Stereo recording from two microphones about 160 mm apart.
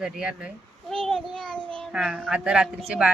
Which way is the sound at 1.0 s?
5° left (ahead or behind).